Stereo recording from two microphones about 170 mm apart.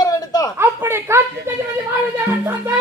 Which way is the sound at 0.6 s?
15° right (ahead or behind).